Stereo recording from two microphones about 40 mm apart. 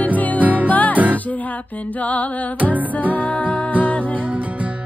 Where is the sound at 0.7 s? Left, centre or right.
Left.